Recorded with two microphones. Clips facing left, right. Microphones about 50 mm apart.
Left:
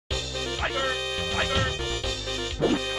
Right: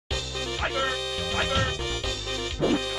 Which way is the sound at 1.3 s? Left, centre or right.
Centre.